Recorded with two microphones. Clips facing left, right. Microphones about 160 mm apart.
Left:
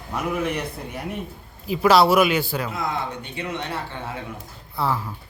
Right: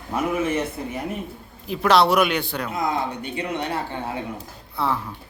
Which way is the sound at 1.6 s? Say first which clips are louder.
Left 1 dB; 5° left (ahead or behind).